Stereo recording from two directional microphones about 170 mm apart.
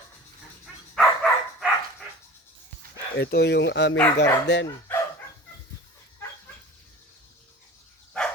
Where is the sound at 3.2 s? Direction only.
70° left (ahead or behind); by 4.6 s 90° left.